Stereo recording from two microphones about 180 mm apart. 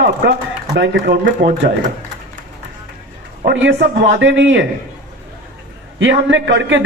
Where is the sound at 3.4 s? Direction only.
80° right.